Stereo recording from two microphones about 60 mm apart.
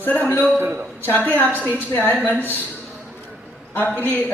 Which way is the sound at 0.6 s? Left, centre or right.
Right.